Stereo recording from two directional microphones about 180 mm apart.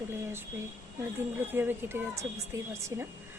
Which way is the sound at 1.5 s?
10° right (ahead or behind).